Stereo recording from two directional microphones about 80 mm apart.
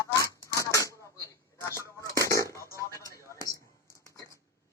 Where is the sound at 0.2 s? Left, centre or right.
Left.